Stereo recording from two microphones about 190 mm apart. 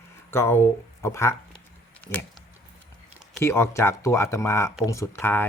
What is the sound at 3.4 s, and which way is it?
Speech, 15° left (ahead or behind).